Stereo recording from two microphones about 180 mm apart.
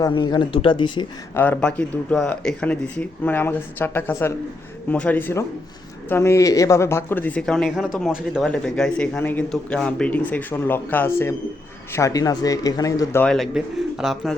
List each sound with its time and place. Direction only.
0.0 s speech: 25° left (ahead or behind)
1.4 s speech: 10° left (ahead or behind)
13.2 s speech: centre (ahead or behind)